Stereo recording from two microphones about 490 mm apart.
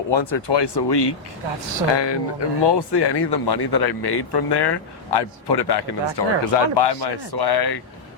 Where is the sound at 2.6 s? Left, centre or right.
Left.